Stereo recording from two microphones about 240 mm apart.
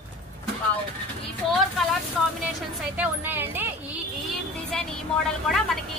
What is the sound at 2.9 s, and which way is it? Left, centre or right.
Speech, centre.